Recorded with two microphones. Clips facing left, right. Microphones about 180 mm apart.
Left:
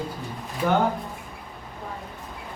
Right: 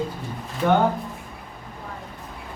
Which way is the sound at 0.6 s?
5° left (ahead or behind).